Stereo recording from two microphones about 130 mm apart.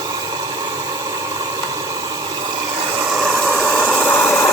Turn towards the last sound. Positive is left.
turn(degrees=10)  # may be behind; listen again after turning